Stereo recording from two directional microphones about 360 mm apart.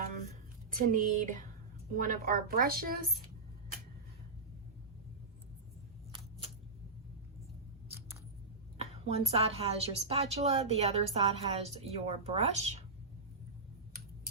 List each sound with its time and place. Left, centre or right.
0.9 s a woman's voice: right
6.1 s a sound: centre
7.9 s scissors: centre
8.8 s a woman's voice: centre